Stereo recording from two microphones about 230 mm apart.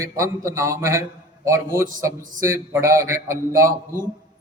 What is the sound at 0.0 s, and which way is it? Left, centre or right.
A man's voice, centre.